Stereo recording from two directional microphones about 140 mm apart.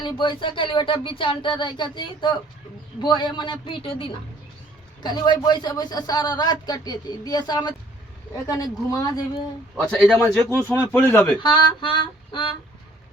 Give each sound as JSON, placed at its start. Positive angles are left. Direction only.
{"t": 0.0, "sound": "a man's voice", "side_deg": 35}
{"t": 10.0, "sound": "speech", "side_deg": 0}
{"t": 10.5, "sound": "speech", "side_deg": 15}
{"t": 11.3, "sound": "speech", "side_deg": 35}